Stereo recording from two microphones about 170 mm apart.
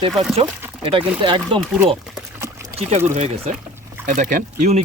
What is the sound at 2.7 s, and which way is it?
Speech, 40° right (ahead or behind).